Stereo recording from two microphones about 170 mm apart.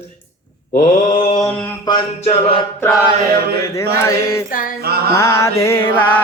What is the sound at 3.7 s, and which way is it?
Mantra, 15° left (ahead or behind).